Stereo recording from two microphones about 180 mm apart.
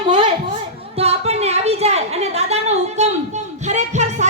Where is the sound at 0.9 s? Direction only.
35° right (ahead or behind).